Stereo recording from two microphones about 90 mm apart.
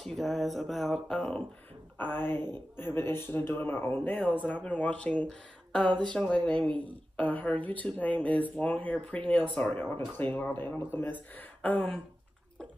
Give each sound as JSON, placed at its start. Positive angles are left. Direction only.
{"t": 0.0, "sound": "speech", "side_deg": 0}
{"t": 2.0, "sound": "speech", "side_deg": 25}
{"t": 11.6, "sound": "throat clearing", "side_deg": 15}